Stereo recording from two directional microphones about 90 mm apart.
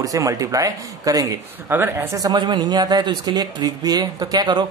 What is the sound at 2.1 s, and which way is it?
Speech, 50° right (ahead or behind).